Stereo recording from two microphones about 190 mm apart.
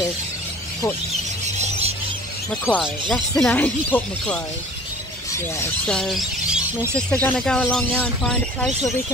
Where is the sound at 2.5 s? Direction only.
5° left (ahead or behind).